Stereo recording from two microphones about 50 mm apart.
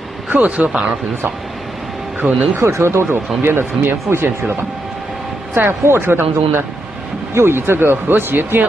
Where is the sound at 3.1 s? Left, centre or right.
Right.